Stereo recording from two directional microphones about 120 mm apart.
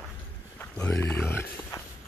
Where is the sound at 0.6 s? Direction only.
10° left (ahead or behind).